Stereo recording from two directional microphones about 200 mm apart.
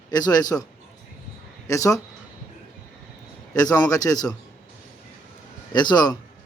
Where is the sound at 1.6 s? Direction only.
15° left (ahead or behind).